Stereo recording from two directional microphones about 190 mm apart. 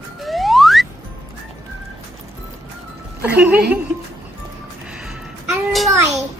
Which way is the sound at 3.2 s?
10° right (ahead or behind).